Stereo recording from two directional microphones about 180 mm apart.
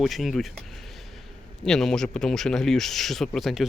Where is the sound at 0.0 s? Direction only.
Centre (ahead or behind).